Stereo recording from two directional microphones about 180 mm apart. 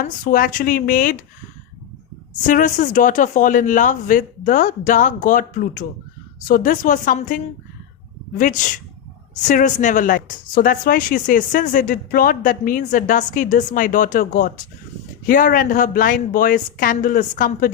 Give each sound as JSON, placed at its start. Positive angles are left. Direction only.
{"t": 0.0, "sound": "speech", "side_deg": 50}
{"t": 2.5, "sound": "speech", "side_deg": 45}